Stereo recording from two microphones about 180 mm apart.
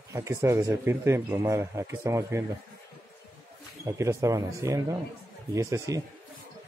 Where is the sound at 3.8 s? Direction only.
15° right (ahead or behind).